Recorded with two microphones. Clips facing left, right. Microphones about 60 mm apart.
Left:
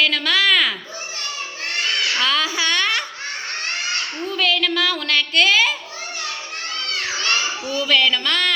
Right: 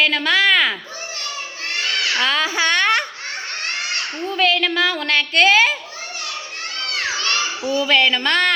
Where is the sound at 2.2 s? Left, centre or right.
Right.